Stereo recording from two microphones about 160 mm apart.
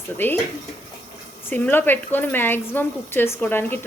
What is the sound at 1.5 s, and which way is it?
Speech, 15° left (ahead or behind).